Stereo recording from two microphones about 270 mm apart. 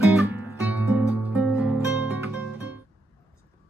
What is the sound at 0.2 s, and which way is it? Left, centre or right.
Music, centre.